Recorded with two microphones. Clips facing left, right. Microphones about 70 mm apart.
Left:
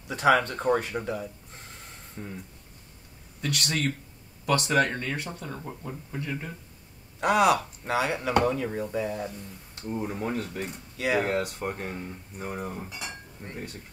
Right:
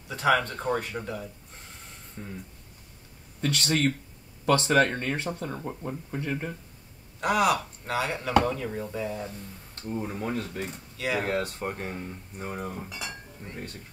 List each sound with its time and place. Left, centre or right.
0.1 s speech: left
2.1 s speech: centre
3.3 s speech: right
5.6 s speech: centre
6.1 s speech: right
7.2 s speech: left
9.8 s speech: centre
12.5 s speech: centre